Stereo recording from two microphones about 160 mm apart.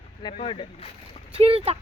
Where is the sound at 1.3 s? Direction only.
35° right (ahead or behind).